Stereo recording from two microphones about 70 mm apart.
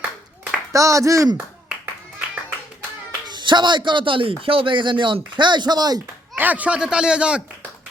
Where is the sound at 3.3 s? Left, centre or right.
Right.